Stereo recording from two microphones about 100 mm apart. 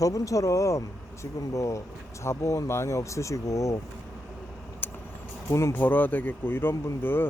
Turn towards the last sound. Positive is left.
turn(degrees=20)  # may be behind; listen again after turning